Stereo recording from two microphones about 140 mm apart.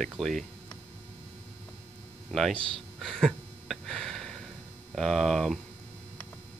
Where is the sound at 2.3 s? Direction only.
Centre (ahead or behind).